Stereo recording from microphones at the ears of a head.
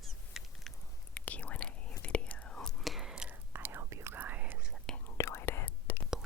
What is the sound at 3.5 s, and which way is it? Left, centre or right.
Whispering, right.